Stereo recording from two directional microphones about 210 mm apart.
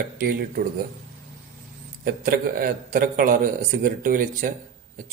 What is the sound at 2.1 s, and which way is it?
A man's voice, 40° right (ahead or behind).